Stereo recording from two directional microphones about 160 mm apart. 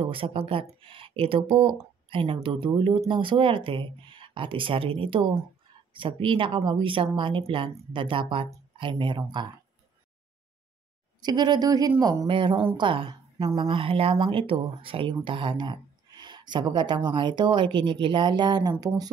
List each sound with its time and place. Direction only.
0.0 s speech: 35° right (ahead or behind)
11.2 s speech: 25° right (ahead or behind)
12.3 s speech: 30° right (ahead or behind)